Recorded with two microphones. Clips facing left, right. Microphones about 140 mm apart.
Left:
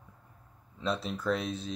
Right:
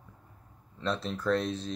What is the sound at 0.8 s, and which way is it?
Speech, 5° left (ahead or behind).